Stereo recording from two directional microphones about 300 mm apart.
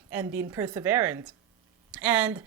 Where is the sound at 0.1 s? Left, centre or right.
Centre.